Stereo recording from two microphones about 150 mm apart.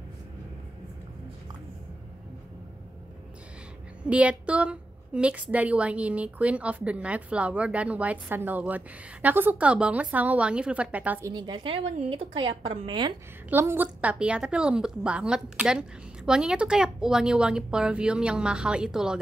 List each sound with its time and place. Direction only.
4.0 s a woman's voice: 10° right (ahead or behind)
11.2 s a woman's voice: 30° right (ahead or behind)
13.5 s a woman's voice: 15° right (ahead or behind)